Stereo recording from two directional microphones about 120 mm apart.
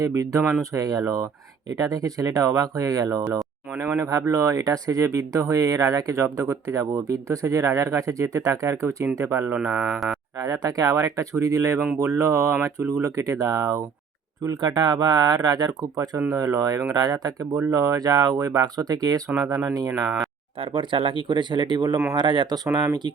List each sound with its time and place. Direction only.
0.0 s speech: 30° right (ahead or behind)
3.2 s a sound: 10° right (ahead or behind)
3.8 s speech: 25° right (ahead or behind)
9.7 s speech: 5° right (ahead or behind)
10.3 s speech: 30° right (ahead or behind)
20.6 s speech: 45° right (ahead or behind)